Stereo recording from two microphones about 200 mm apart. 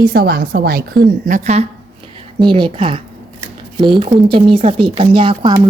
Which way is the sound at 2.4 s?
25° right (ahead or behind).